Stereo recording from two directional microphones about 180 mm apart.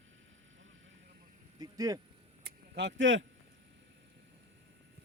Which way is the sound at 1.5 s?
20° right (ahead or behind).